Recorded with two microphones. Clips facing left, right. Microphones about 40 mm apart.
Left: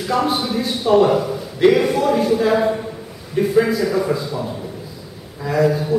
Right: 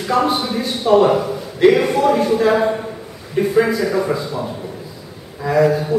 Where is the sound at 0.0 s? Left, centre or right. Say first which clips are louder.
Right 2 dB; centre.